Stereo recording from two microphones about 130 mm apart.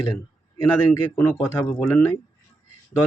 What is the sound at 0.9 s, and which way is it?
Speech, 20° left (ahead or behind).